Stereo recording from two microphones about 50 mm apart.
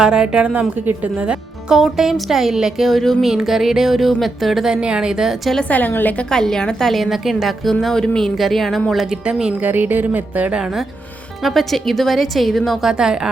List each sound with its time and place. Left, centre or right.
0.0 s a woman's voice: centre
1.7 s a woman's voice: centre
3.2 s speech: centre
5.6 s a woman's voice: left
6.3 s a woman's voice: centre
8.4 s a woman's voice: centre
9.2 s speech: centre
9.6 s speech: right
11.4 s a woman's voice: centre
12.9 s speech: centre